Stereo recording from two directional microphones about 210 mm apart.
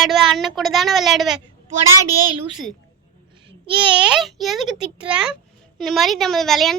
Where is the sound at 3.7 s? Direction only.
25° right (ahead or behind).